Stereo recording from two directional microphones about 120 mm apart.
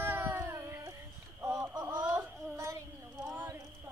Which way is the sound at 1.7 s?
35° right (ahead or behind).